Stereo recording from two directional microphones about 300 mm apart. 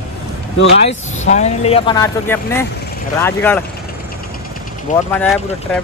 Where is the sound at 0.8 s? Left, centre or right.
Left; by 3.6 s centre.